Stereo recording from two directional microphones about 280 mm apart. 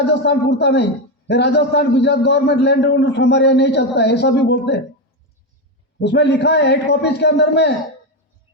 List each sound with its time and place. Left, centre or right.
0.0 s a man's voice: left
6.0 s a man's voice: left